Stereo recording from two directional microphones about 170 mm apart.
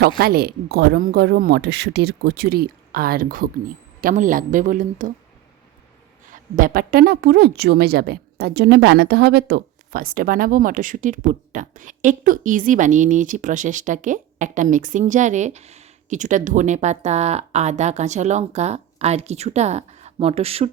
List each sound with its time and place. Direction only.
0.2 s a woman's voice: 65° right (ahead or behind)
6.3 s a woman's voice: 55° right (ahead or behind); by 20.7 s 35° right (ahead or behind)